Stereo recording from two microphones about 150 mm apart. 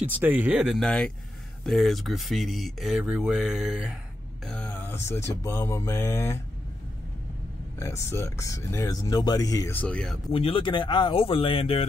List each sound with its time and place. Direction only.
0.2 s speech: 10° right (ahead or behind)
4.5 s speech: 10° left (ahead or behind)
7.8 s speech: 20° left (ahead or behind)
9.8 s speech: 5° left (ahead or behind)
10.3 s speech: 40° left (ahead or behind)